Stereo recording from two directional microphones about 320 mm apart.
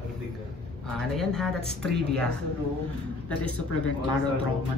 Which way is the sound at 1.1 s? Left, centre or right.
Centre.